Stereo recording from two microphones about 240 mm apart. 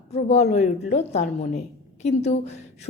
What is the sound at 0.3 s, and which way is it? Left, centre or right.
A woman's voice, left.